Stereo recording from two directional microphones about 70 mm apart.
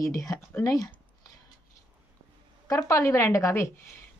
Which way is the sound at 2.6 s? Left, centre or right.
Left.